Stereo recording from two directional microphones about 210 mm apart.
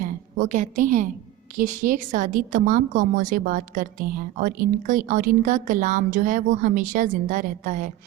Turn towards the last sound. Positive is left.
turn(degrees=-40)  # may be behind; listen again after turning